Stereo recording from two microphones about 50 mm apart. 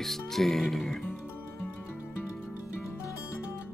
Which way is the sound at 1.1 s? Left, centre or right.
Left.